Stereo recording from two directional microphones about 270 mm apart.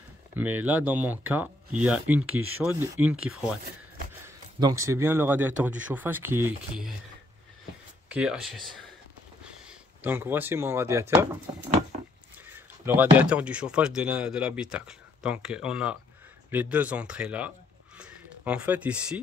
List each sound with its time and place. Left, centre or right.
0.4 s speech: centre
2.2 s speech: right
2.6 s speech: centre
4.6 s speech: centre
8.1 s speech: centre
12.5 s speech: centre
17.9 s a sound: centre